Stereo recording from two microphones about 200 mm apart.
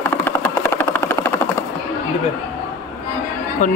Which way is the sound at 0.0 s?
10° left (ahead or behind).